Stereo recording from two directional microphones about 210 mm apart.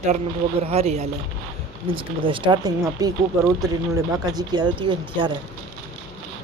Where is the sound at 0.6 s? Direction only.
30° right (ahead or behind).